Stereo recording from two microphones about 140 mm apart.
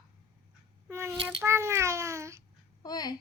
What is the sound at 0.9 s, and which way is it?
A child's voice, 15° right (ahead or behind).